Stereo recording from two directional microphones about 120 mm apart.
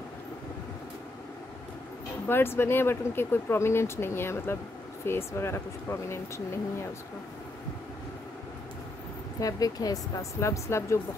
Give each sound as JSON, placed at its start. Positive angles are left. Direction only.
{"t": 2.2, "sound": "speech", "side_deg": 20}
{"t": 9.4, "sound": "speech", "side_deg": 30}